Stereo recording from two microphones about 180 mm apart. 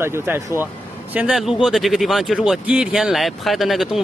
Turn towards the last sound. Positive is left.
turn(degrees=0)  # may be behind; listen again after turning